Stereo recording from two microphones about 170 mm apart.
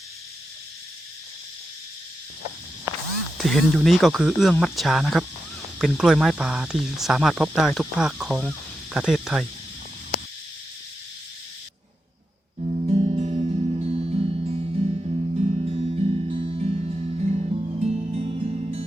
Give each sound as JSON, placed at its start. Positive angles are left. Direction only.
{"t": 2.9, "sound": "music", "side_deg": -15}
{"t": 3.3, "sound": "speech", "side_deg": 0}
{"t": 12.5, "sound": "music", "side_deg": -40}